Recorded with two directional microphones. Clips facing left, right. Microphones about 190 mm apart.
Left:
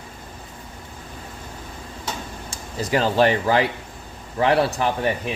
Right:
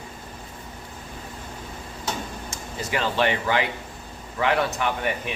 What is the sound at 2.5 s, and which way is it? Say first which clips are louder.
Speech: left 7 dB; 40° left (ahead or behind).